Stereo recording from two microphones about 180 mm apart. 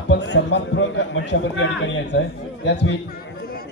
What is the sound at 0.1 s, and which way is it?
A man's voice, 75° left (ahead or behind).